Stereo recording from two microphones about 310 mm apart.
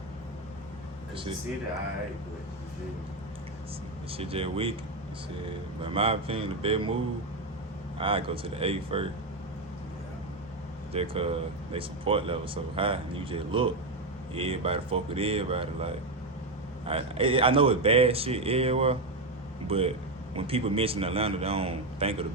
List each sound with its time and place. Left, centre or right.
1.1 s speech: centre
4.1 s speech: centre
5.8 s speech: centre
7.9 s speech: centre
10.9 s speech: centre